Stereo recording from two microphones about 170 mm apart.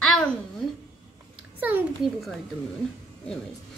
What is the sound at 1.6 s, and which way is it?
Speech, 10° right (ahead or behind).